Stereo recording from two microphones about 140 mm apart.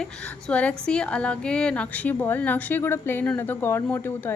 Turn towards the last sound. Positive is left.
turn(degrees=15)  # may be behind; listen again after turning